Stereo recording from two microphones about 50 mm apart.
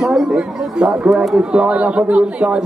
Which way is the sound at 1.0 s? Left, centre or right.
Centre.